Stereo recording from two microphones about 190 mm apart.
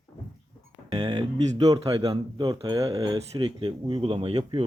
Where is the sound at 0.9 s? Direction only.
25° right (ahead or behind).